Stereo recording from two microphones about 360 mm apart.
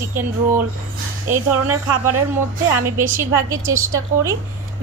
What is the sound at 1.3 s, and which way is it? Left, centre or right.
Speech, right.